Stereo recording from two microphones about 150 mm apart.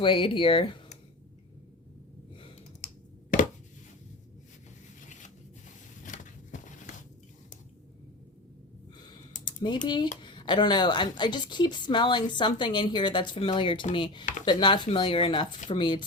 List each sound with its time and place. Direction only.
0.0 s a woman's voice: 35° left (ahead or behind)
2.8 s computer keyboard: 65° left (ahead or behind)
6.0 s a sound: 55° left (ahead or behind)
9.8 s a woman's voice: 30° left (ahead or behind)